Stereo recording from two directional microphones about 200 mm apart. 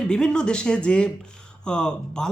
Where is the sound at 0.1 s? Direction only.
5° left (ahead or behind).